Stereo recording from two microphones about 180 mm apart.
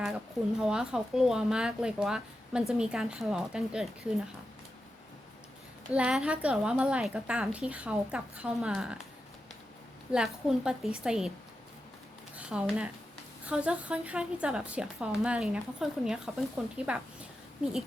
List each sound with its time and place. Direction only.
0.6 s speech: 5° right (ahead or behind)
5.9 s a woman's voice: 5° right (ahead or behind)
10.1 s speech: 5° right (ahead or behind)
12.4 s a woman's voice: 5° right (ahead or behind)